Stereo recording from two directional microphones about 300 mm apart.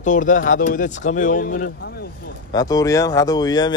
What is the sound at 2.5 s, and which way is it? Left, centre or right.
Speech, centre.